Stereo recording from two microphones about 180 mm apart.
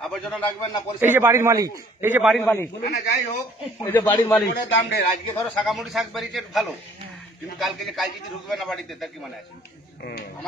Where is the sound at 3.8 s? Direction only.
15° left (ahead or behind).